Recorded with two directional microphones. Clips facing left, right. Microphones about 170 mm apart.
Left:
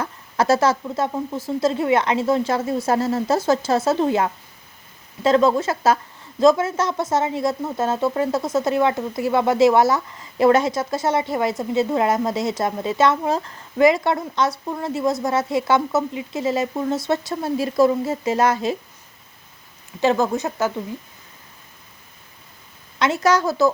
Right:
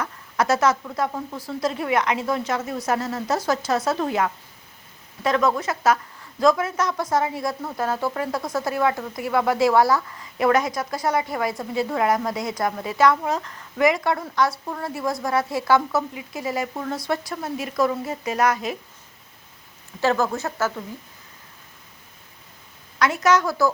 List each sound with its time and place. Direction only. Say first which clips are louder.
0.0 s speech: left 2 dB; 30° left (ahead or behind)
20.0 s speech: left 3 dB; 20° left (ahead or behind)
23.0 s speech: left 1 dB; 25° left (ahead or behind)